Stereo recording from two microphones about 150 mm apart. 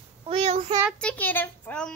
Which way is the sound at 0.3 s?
40° right (ahead or behind).